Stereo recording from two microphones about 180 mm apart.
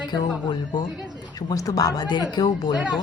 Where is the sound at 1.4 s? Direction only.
20° left (ahead or behind).